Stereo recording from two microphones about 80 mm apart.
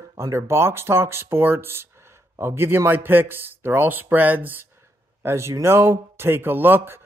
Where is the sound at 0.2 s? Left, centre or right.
Right.